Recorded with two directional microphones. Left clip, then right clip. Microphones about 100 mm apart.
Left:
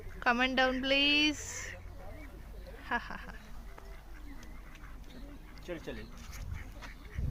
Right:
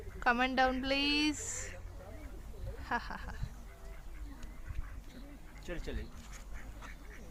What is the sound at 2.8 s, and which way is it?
Speech, centre (ahead or behind).